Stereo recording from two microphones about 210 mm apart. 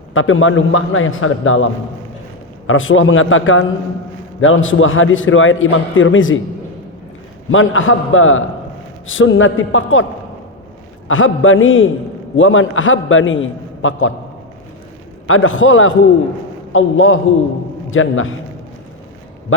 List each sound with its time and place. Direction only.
0.1 s a man's voice: 70° left (ahead or behind)
2.6 s a man's voice: 70° left (ahead or behind)
7.5 s a man's voice: 70° left (ahead or behind)
11.1 s a man's voice: 70° left (ahead or behind)
15.3 s a man's voice: 70° left (ahead or behind)